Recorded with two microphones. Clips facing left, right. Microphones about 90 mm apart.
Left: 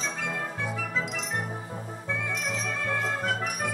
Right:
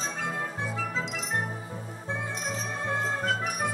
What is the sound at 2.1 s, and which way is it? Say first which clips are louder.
Music: left 1 dB; 35° right (ahead or behind).